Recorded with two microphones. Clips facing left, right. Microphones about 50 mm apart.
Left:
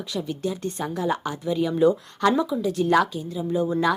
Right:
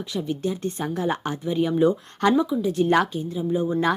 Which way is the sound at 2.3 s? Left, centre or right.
Centre.